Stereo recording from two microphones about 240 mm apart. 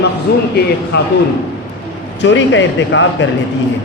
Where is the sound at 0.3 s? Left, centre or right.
Left.